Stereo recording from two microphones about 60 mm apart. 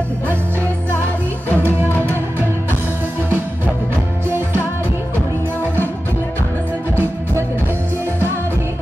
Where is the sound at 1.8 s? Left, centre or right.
Left.